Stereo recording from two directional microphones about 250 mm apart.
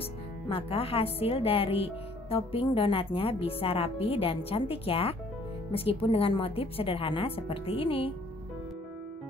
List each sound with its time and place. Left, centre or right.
0.5 s speech: left